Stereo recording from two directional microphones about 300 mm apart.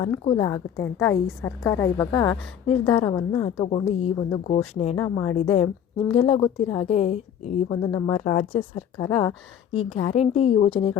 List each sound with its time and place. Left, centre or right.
0.0 s a woman's voice: centre
7.8 s a woman's voice: centre